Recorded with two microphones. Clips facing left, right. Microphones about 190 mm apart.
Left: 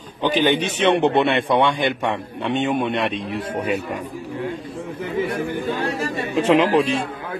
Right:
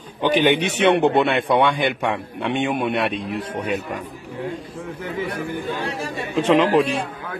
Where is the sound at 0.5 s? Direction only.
65° right (ahead or behind).